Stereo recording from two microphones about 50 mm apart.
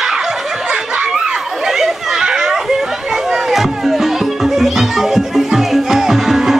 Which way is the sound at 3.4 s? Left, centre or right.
Centre.